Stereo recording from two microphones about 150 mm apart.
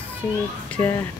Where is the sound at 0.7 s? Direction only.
10° left (ahead or behind).